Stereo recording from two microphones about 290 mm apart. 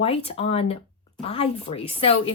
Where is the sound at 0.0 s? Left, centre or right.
Left.